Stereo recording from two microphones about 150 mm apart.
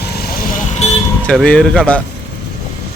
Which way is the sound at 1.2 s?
5° left (ahead or behind).